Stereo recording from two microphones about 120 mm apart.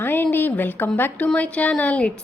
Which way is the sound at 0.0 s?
15° left (ahead or behind).